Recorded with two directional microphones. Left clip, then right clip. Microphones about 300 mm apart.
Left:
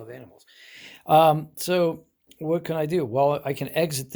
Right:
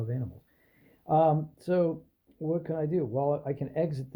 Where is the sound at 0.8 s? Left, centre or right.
Left.